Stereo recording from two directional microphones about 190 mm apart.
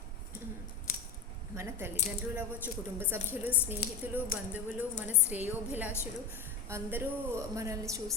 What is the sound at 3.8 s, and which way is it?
Speech, 55° left (ahead or behind).